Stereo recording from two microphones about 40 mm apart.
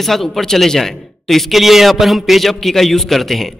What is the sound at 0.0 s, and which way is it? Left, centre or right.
A man's voice, centre.